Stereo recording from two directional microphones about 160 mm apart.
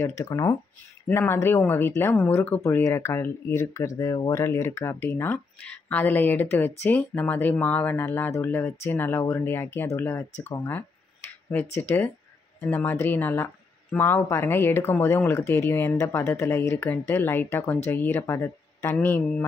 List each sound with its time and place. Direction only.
0.0 s speech: 20° left (ahead or behind)
12.6 s speech: 10° left (ahead or behind)